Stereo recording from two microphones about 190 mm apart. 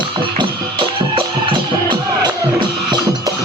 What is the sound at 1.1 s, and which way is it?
Music, 25° right (ahead or behind).